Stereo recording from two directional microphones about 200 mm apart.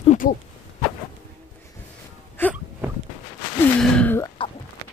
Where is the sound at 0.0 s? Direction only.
35° left (ahead or behind).